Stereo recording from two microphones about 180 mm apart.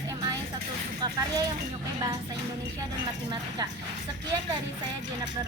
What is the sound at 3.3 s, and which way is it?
Speech, 25° right (ahead or behind).